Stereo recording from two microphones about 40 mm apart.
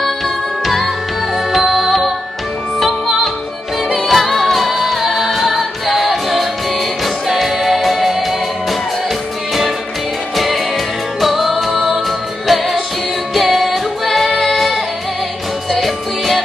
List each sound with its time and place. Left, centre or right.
0.7 s music: centre
10.3 s music: centre